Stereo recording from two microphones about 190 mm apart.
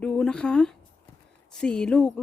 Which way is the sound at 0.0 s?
5° left (ahead or behind).